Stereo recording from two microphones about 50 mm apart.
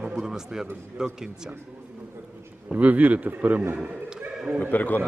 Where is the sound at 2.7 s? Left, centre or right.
Right.